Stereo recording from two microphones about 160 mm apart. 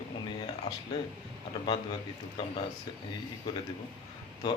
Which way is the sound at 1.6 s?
30° left (ahead or behind).